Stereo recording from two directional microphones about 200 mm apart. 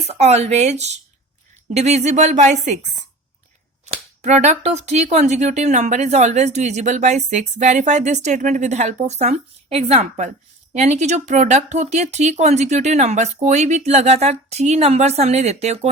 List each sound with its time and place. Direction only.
0.1 s speech: 35° right (ahead or behind)
3.8 s speech: 35° right (ahead or behind)